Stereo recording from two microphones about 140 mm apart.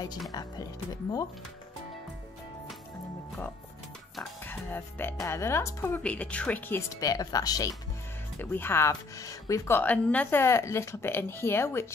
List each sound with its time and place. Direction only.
0.3 s speech: 30° left (ahead or behind)
4.2 s speech: 15° left (ahead or behind)
6.9 s speech: 25° left (ahead or behind)
8.4 s speech: 15° left (ahead or behind)